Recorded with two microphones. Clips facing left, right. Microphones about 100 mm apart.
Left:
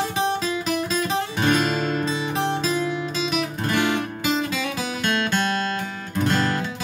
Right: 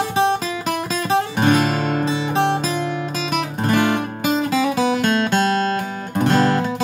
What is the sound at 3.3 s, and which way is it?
Music, 45° right (ahead or behind).